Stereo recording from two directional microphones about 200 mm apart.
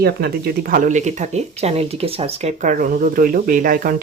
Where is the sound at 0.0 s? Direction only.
50° right (ahead or behind).